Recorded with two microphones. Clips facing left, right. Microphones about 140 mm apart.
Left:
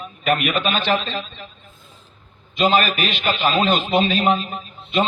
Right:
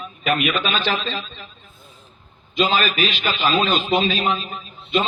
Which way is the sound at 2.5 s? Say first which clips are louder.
Left 2 dB; 55° left (ahead or behind).